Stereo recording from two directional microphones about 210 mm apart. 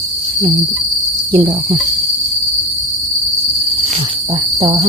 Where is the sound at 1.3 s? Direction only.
25° right (ahead or behind).